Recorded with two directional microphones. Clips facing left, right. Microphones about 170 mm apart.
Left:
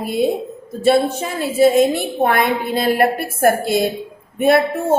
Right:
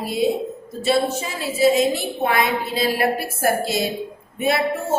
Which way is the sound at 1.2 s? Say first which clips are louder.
Left 5 dB; 55° left (ahead or behind).